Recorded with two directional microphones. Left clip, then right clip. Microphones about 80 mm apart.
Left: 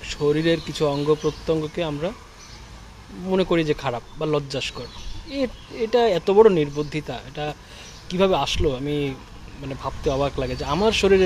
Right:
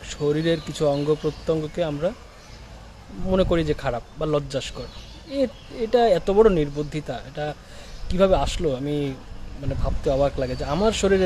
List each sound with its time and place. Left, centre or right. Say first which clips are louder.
0.0 s speech: left 2 dB; right
3.3 s speech: even; right